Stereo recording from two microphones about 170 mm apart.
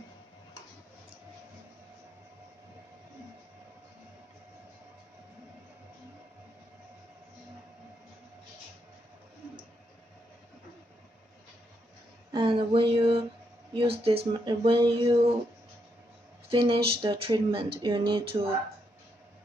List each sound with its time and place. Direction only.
12.3 s speech: 30° right (ahead or behind)
16.4 s speech: 30° right (ahead or behind)